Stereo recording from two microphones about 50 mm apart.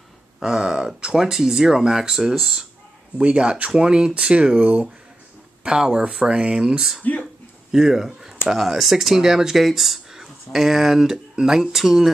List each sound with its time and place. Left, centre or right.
0.4 s speech: centre
3.2 s speech: right
7.0 s speech: left
7.7 s speech: centre